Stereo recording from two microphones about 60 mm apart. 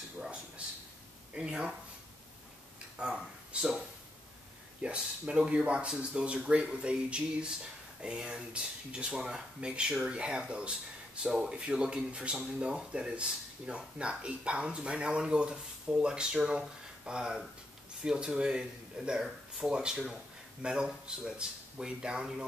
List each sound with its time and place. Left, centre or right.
1.3 s speech: centre
3.0 s speech: centre
4.8 s speech: centre